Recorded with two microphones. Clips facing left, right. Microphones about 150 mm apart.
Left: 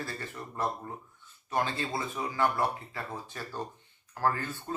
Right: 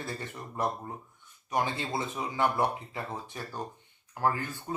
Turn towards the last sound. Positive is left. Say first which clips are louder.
# right 1 dB
turn(degrees=-10)  # may be behind; listen again after turning